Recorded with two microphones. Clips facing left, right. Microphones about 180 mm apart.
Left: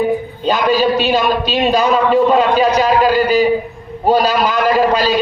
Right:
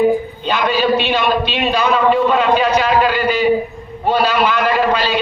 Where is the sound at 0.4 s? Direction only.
40° left (ahead or behind).